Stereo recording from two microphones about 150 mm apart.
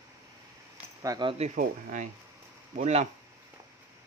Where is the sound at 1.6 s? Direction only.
55° right (ahead or behind).